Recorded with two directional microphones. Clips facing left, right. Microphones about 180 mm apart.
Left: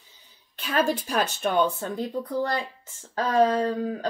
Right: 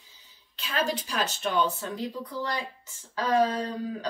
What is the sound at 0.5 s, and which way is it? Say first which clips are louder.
Speech: left 5 dB; 50° left (ahead or behind).